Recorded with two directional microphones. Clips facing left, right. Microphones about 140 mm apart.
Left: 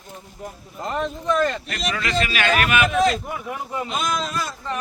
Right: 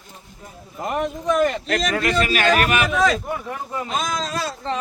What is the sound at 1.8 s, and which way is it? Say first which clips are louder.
Speech: right 1 dB; 50° right (ahead or behind).